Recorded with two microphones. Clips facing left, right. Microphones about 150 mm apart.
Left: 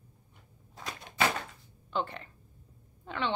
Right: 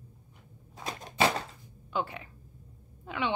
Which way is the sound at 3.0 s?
10° right (ahead or behind).